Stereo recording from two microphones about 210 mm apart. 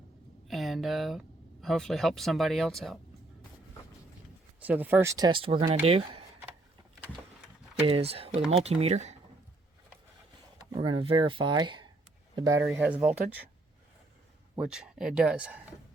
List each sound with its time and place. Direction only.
0.4 s a sound: centre (ahead or behind)
1.6 s speech: centre (ahead or behind)
4.6 s speech: 10° right (ahead or behind); by 6.2 s 25° right (ahead or behind)
7.9 s speech: 25° right (ahead or behind)
10.8 s speech: 25° right (ahead or behind); by 13.5 s 5° right (ahead or behind)
14.5 s speech: 5° right (ahead or behind)